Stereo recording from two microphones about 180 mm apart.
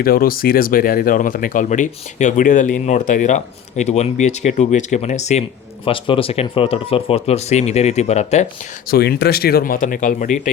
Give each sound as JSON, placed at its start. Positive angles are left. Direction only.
{"t": 0.0, "sound": "speech", "side_deg": 55}
{"t": 8.9, "sound": "speech", "side_deg": 65}